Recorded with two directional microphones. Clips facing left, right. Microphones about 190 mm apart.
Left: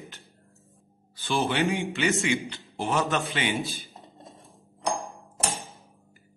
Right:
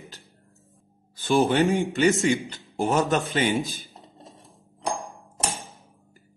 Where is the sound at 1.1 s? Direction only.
45° right (ahead or behind).